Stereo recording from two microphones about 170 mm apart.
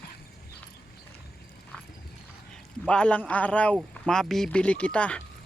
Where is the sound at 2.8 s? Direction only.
5° left (ahead or behind).